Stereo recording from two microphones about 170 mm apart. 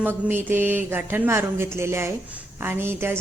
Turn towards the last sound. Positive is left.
turn(degrees=-15)  # may be behind; listen again after turning